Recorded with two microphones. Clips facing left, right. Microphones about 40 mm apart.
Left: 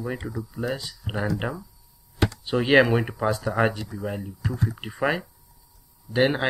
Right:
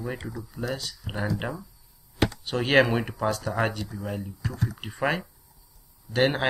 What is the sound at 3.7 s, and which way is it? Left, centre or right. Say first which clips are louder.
Speech: left 2 dB; left.